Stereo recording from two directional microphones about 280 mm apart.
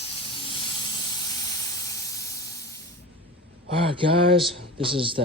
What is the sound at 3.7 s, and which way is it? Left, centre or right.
Speech, right.